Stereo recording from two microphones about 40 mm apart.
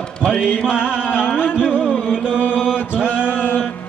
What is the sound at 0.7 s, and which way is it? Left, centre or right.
Music, right.